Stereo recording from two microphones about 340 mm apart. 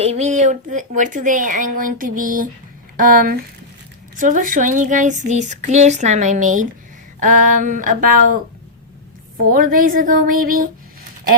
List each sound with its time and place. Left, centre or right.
0.0 s speech: centre
9.5 s speech: right